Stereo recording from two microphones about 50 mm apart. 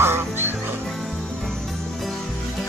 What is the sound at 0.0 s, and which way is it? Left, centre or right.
Music, right.